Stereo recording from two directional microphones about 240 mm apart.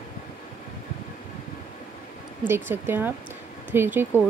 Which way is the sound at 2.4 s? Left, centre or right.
Centre.